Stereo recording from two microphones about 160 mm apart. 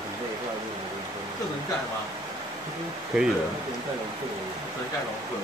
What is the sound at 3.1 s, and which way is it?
Speech, centre (ahead or behind).